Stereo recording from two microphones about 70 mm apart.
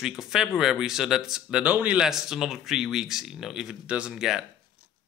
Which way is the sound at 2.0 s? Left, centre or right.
Centre.